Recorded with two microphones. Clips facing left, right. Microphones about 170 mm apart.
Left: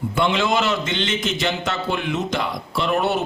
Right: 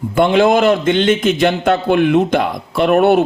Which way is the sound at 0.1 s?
55° right (ahead or behind).